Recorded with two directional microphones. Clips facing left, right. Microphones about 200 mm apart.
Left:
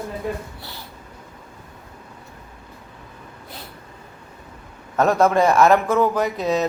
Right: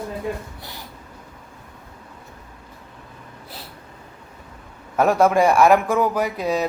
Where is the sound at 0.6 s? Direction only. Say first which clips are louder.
Even; 15° right (ahead or behind).